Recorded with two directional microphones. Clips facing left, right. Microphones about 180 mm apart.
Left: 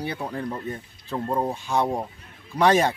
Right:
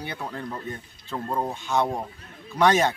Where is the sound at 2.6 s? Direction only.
35° left (ahead or behind).